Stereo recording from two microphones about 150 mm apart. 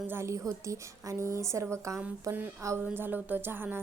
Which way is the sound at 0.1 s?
20° right (ahead or behind).